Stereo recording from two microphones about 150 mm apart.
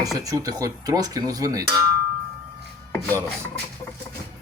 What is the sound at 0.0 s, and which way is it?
Speech, 25° right (ahead or behind).